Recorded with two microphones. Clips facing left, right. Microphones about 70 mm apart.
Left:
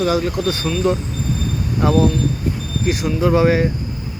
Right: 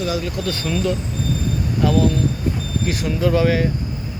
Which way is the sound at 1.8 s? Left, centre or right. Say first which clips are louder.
Left 2 dB; left.